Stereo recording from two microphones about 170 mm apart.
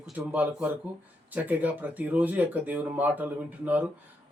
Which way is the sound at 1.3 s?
10° right (ahead or behind).